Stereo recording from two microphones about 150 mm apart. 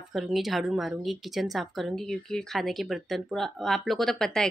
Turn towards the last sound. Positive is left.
turn(degrees=5)  # may be behind; listen again after turning